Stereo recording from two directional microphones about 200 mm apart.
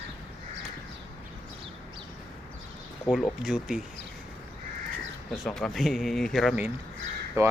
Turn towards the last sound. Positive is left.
turn(degrees=-15)  # may be behind; listen again after turning